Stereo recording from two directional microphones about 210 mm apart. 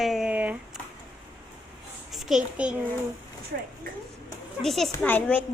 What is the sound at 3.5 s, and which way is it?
Speech, 55° right (ahead or behind).